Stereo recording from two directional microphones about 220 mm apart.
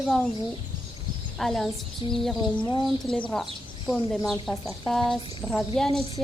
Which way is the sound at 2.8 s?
Centre (ahead or behind).